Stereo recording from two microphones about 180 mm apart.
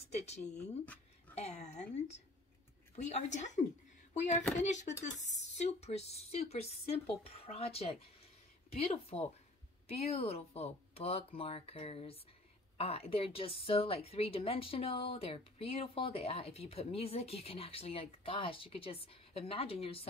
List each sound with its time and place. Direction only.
0.0 s a woman's voice: 35° left (ahead or behind)
4.4 s speech: 10° left (ahead or behind)
4.6 s a woman's voice: 40° left (ahead or behind)